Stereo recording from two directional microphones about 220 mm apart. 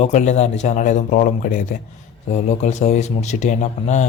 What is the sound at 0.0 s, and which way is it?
Speech, 30° left (ahead or behind).